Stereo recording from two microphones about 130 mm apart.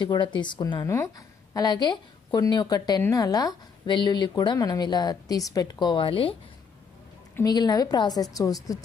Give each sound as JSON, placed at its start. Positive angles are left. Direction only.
{"t": 0.0, "sound": "speech", "side_deg": 35}
{"t": 0.8, "sound": "a woman's voice", "side_deg": 25}
{"t": 7.4, "sound": "a woman's voice", "side_deg": 30}